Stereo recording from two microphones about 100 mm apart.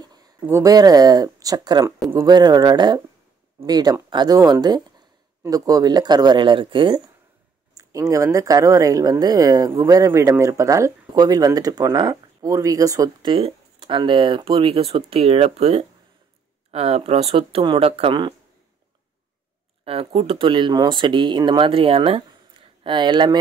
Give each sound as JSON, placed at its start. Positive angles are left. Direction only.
{"t": 0.0, "sound": "a sound", "side_deg": -40}
{"t": 0.7, "sound": "speech", "side_deg": -40}
{"t": 1.9, "sound": "speech", "side_deg": -25}
{"t": 2.2, "sound": "speech", "side_deg": -45}
{"t": 7.7, "sound": "speech", "side_deg": -35}
{"t": 13.2, "sound": "speech", "side_deg": -55}
{"t": 19.8, "sound": "speech", "side_deg": -75}
{"t": 22.8, "sound": "speech", "side_deg": -50}